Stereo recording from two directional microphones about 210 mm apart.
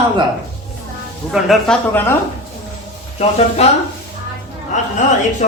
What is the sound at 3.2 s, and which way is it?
Speech, 30° left (ahead or behind).